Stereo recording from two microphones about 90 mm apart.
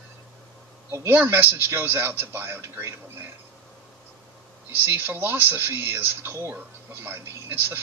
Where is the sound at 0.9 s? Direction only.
25° right (ahead or behind).